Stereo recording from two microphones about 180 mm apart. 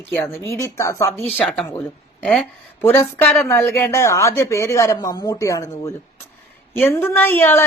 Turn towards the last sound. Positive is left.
turn(degrees=10)  # may be behind; listen again after turning